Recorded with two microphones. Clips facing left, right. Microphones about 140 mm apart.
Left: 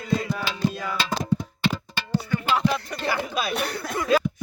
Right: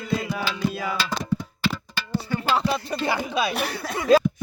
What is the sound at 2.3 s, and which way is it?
Music, 30° right (ahead or behind).